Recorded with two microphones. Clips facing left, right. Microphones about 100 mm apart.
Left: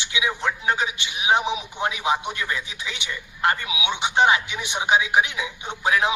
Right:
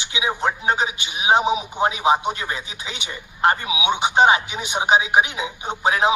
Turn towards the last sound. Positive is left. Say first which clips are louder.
# right 3 dB
turn(degrees=-20)  # may be behind; listen again after turning